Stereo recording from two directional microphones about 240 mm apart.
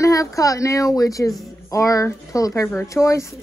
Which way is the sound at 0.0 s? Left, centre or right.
Centre.